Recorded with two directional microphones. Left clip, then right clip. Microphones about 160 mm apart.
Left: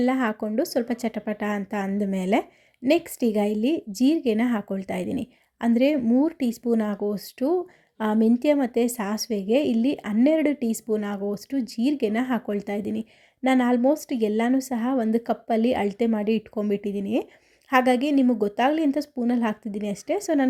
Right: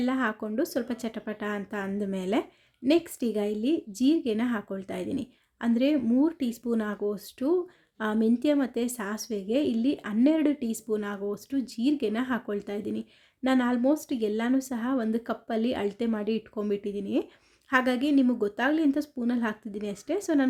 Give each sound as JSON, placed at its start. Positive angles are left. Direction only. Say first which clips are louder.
{"t": 0.0, "sound": "a woman's voice", "louder": "left 5 dB", "side_deg": 20}